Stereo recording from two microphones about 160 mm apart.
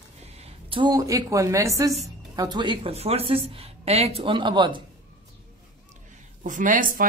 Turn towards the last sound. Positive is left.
turn(degrees=-55)  # may be behind; listen again after turning